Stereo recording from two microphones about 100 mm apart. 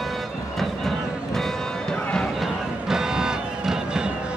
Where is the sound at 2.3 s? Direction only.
5° right (ahead or behind).